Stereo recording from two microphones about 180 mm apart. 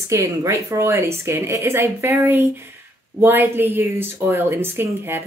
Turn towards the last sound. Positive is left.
turn(degrees=-10)  # may be behind; listen again after turning